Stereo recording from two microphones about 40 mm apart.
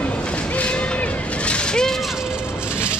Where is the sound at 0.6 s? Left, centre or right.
Left.